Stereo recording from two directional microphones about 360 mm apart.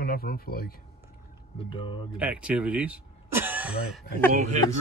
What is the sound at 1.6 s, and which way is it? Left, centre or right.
Speech, centre.